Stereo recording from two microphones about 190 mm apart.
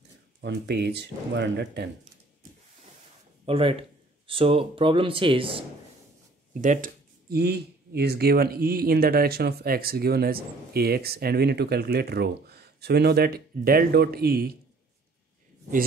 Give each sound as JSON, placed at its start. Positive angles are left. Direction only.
{"t": 0.4, "sound": "speech", "side_deg": -65}
{"t": 3.4, "sound": "speech", "side_deg": -30}
{"t": 6.6, "sound": "speech", "side_deg": -45}